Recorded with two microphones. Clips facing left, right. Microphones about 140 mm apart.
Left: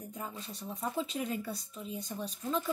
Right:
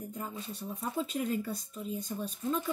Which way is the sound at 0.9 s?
45° right (ahead or behind).